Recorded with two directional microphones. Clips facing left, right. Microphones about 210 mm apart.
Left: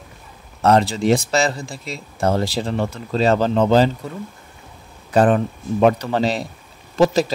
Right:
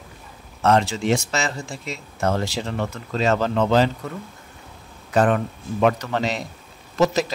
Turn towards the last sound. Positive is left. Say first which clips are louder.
# left 4 dB
turn(degrees=30)  # may be behind; listen again after turning